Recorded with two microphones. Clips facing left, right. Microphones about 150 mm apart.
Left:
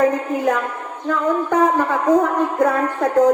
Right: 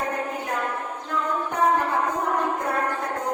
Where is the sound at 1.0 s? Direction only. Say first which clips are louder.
Left 9 dB; 90° left.